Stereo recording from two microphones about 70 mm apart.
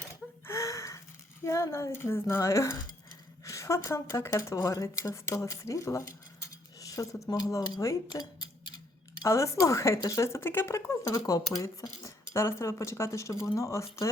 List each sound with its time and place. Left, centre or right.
0.4 s a sound: left
1.5 s a woman's voice: left
2.6 s cutlery: left
4.4 s speech: left
6.7 s cutlery: left
7.3 s speech: left
8.1 s speech: left
9.2 s speech: left
11.3 s speech: left